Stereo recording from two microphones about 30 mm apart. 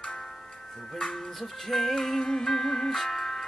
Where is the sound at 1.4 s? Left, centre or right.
Centre.